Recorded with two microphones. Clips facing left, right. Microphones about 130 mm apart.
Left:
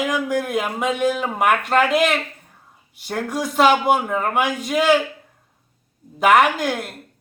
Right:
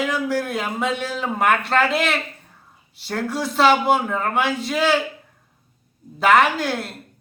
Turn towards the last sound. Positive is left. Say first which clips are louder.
# left 1 dB
turn(degrees=15)  # may be behind; listen again after turning